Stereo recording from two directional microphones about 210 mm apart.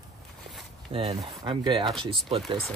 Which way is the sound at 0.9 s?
20° right (ahead or behind).